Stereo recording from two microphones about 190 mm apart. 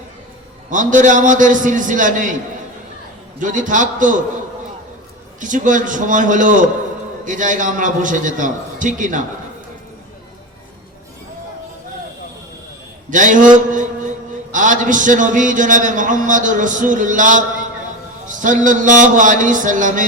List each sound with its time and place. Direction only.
0.7 s a man's voice: 40° right (ahead or behind)
3.4 s a man's voice: 40° right (ahead or behind)
5.4 s a man's voice: 40° right (ahead or behind)
13.1 s a man's voice: 40° right (ahead or behind)